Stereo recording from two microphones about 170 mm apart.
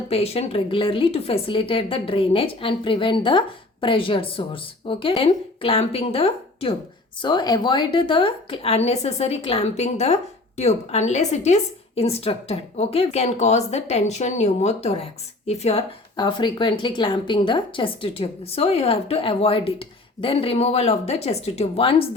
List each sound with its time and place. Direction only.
0.1 s a woman's voice: 35° left (ahead or behind)